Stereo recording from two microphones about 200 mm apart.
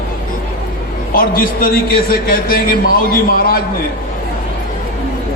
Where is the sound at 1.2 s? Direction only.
45° left (ahead or behind).